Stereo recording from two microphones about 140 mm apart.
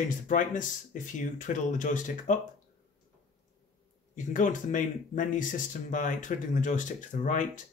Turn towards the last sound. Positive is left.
turn(degrees=65)  # may be behind; listen again after turning